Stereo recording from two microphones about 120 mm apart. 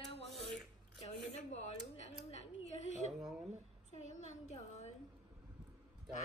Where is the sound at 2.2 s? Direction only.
70° left (ahead or behind).